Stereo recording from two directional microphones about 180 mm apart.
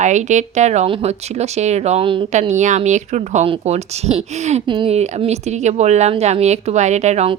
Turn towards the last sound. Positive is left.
turn(degrees=-40)  # may be behind; listen again after turning